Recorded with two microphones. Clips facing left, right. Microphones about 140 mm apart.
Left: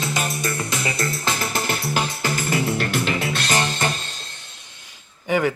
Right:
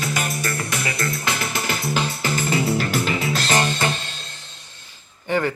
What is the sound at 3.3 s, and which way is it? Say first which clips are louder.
Music: right 2 dB; 40° right (ahead or behind).